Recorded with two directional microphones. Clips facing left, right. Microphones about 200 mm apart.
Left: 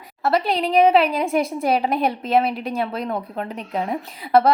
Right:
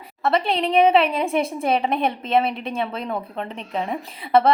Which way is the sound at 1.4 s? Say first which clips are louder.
Left 1 dB; 30° right (ahead or behind).